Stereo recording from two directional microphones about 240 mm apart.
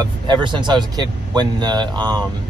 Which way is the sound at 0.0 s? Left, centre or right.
Centre.